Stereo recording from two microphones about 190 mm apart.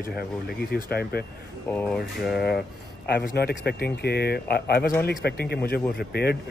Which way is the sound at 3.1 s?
55° left (ahead or behind).